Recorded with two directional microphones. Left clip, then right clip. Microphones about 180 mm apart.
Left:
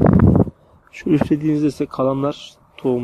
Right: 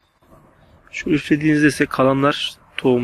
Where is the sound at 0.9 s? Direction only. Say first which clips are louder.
Left 2 dB; 45° left (ahead or behind).